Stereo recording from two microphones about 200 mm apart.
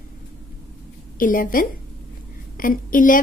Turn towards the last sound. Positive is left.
turn(degrees=40)  # may be behind; listen again after turning